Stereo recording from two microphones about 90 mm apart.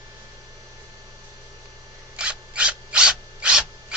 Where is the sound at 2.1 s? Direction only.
15° right (ahead or behind).